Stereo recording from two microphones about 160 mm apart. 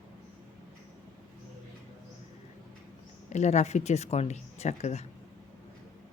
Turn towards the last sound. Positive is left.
turn(degrees=40)  # may be behind; listen again after turning